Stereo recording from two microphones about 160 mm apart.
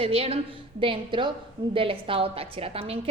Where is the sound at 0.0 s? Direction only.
40° right (ahead or behind).